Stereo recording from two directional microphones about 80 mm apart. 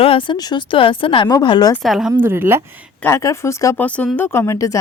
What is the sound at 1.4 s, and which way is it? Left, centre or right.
Speech, left.